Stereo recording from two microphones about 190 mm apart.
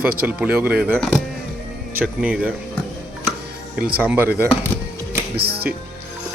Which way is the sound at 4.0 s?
10° right (ahead or behind).